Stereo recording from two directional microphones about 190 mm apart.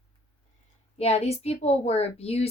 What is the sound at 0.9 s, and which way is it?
Speech, 35° left (ahead or behind).